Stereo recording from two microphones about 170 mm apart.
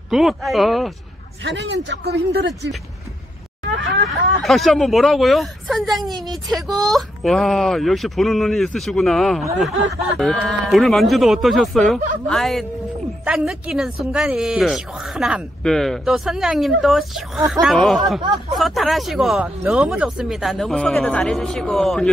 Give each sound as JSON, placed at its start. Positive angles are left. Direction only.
{"t": 0.1, "sound": "speech", "side_deg": 0}
{"t": 1.4, "sound": "speech", "side_deg": -90}
{"t": 1.9, "sound": "speech", "side_deg": -70}
{"t": 3.7, "sound": "speech", "side_deg": -90}
{"t": 4.4, "sound": "speech", "side_deg": 0}